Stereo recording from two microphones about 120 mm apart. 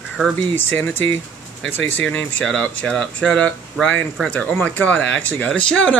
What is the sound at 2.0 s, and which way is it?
Speech, 5° left (ahead or behind).